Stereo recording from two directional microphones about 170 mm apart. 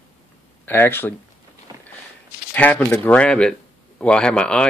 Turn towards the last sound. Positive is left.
turn(degrees=5)  # may be behind; listen again after turning